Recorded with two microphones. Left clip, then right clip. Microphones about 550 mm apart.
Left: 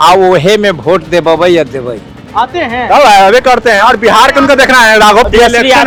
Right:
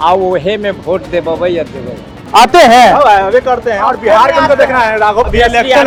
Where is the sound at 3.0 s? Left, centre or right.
Left.